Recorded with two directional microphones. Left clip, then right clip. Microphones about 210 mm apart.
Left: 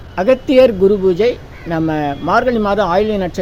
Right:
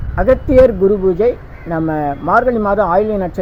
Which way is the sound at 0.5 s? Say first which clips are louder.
Right 1 dB; 5° left (ahead or behind).